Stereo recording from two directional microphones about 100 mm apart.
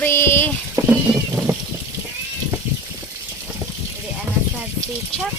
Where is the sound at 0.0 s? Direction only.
25° left (ahead or behind).